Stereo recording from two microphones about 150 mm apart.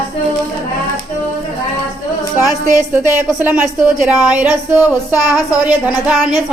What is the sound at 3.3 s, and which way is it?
Speech, 10° right (ahead or behind).